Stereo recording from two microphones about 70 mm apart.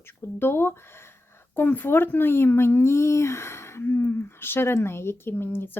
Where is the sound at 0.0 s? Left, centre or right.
Left.